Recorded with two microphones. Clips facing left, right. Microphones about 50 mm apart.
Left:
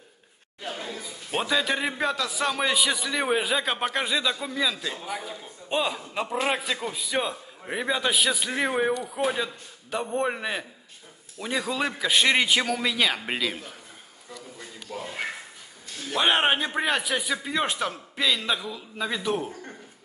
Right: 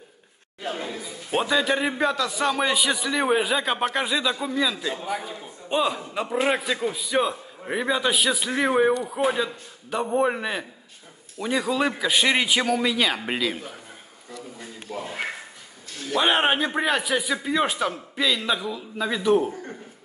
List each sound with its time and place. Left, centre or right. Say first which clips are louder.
0.7 s chatter: right 4 dB; centre
1.3 s a man's voice: right 3 dB; centre
6.2 s a man's voice: right 4 dB; centre
9.0 s a man's voice: right 3 dB; centre
9.3 s a man's voice: right 3 dB; centre
16.1 s a man's voice: right 1 dB; centre